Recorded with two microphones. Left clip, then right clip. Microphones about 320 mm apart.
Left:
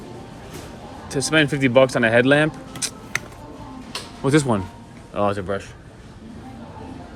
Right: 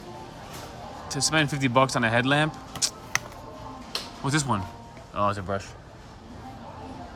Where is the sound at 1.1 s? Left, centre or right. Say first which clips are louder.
Left 6 dB; centre.